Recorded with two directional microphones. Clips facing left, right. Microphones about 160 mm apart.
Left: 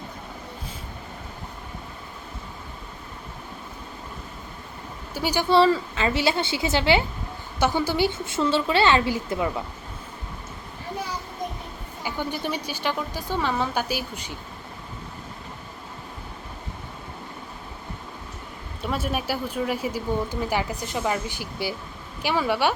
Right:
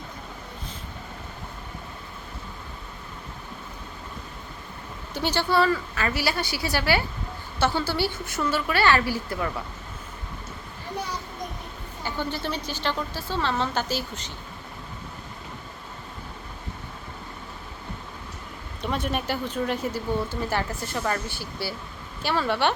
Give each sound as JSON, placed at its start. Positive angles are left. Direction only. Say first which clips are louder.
{"t": 5.1, "sound": "speech", "louder": "left 1 dB", "side_deg": 10}
{"t": 5.5, "sound": "a woman's voice", "louder": "left 6 dB", "side_deg": 25}
{"t": 12.0, "sound": "speech", "louder": "left 1 dB", "side_deg": 15}
{"t": 18.8, "sound": "speech", "louder": "even", "side_deg": 5}